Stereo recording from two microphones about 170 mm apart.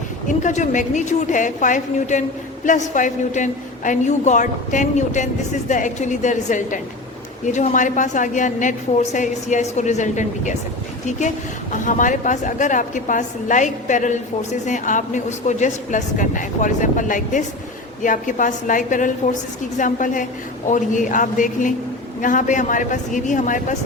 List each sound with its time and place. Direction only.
0.3 s a woman's voice: 45° left (ahead or behind)
11.7 s a woman's voice: 50° left (ahead or behind)